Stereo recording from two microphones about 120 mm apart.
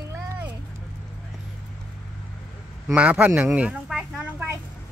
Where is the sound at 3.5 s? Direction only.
5° right (ahead or behind).